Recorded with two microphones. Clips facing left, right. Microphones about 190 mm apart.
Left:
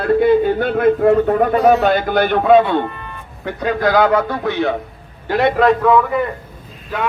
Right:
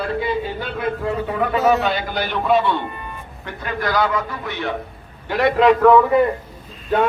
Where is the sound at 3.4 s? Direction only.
85° left.